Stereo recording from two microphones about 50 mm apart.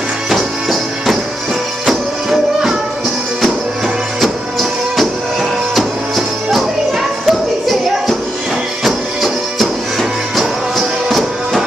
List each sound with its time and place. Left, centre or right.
0.3 s music: centre
4.2 s music: centre
8.8 s music: centre
10.8 s music: centre